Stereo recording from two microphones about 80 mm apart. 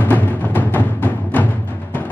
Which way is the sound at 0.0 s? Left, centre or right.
Left.